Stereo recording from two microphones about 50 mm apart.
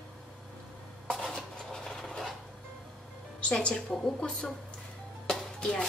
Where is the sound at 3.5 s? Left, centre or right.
Centre.